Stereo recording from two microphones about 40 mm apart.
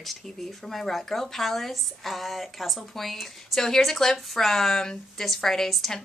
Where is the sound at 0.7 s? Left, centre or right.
Centre.